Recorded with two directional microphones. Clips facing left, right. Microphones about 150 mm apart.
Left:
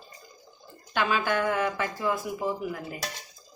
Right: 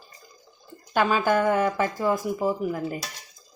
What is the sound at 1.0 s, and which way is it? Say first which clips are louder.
Speech: right 5 dB; 40° right (ahead or behind).